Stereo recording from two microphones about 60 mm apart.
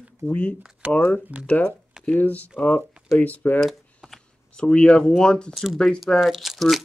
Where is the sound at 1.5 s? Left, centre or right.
Left.